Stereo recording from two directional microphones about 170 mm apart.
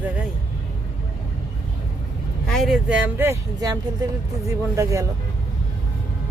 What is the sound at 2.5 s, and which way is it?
Speech, centre (ahead or behind).